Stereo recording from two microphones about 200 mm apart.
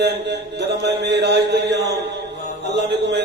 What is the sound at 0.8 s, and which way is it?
Music, 55° right (ahead or behind).